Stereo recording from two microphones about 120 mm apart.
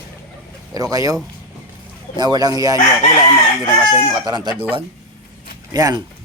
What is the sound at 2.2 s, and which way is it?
Speech, 35° right (ahead or behind).